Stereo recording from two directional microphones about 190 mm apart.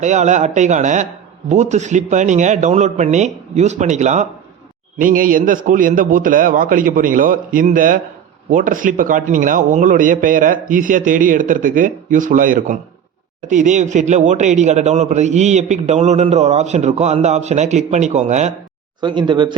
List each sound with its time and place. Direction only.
0.0 s a man's voice: 40° right (ahead or behind)
18.9 s speech: 25° right (ahead or behind)